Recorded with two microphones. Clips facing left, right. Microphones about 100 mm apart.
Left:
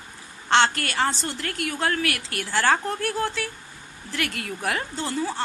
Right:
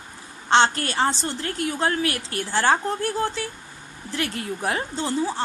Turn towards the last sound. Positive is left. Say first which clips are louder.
# right 3 dB
turn(degrees=-20)  # may be behind; listen again after turning